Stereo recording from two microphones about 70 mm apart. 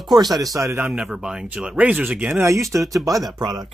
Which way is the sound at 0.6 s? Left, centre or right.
Right.